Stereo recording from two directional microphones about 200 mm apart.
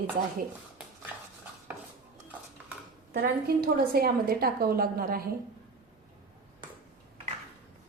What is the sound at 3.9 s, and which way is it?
A woman's voice, 50° right (ahead or behind).